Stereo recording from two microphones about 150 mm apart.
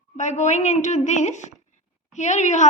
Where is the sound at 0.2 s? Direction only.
50° left (ahead or behind).